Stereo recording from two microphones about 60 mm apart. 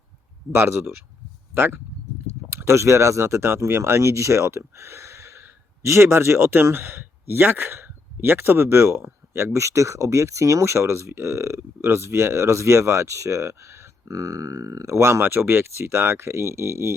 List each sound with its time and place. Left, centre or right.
0.5 s speech: right
2.5 s a sound: right
2.7 s speech: right
14.1 s speech: right
15.2 s speech: right